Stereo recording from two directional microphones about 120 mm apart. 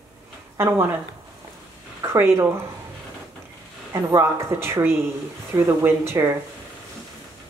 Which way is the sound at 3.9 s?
25° right (ahead or behind).